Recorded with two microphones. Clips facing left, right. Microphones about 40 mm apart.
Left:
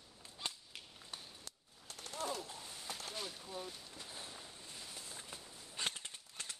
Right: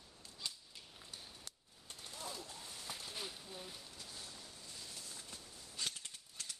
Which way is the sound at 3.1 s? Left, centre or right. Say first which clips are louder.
Left 3 dB; centre.